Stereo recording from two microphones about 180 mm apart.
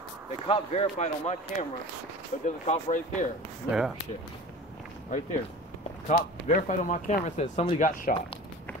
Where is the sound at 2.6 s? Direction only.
40° left (ahead or behind).